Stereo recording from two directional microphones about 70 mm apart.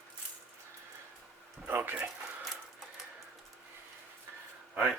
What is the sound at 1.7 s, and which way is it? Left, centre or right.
Speech, right.